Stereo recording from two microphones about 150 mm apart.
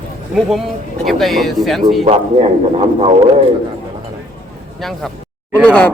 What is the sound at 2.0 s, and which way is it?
Speech, 40° right (ahead or behind).